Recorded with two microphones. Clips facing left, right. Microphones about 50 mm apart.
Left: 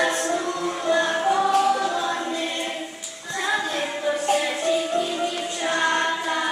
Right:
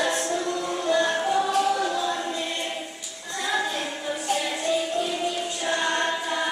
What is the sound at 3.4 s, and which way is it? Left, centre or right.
Music, left.